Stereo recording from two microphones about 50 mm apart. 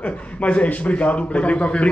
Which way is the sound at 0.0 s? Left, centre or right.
Left.